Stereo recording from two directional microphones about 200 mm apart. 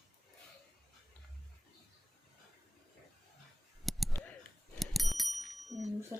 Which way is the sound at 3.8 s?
Centre (ahead or behind).